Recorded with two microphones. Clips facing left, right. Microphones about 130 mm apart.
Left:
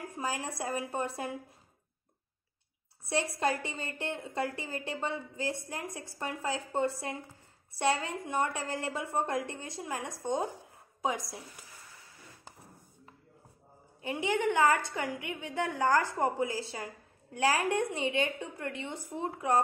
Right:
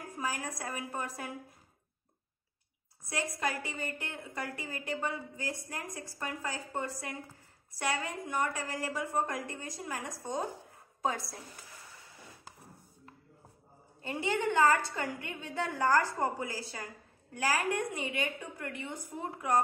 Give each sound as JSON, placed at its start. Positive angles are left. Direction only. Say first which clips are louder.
{"t": 0.2, "sound": "a woman's voice", "louder": "left 2 dB", "side_deg": 30}
{"t": 3.3, "sound": "a woman's voice", "louder": "left 4 dB", "side_deg": 25}
{"t": 10.6, "sound": "a sound", "louder": "even", "side_deg": 15}
{"t": 14.0, "sound": "a woman's voice", "louder": "left 2 dB", "side_deg": 15}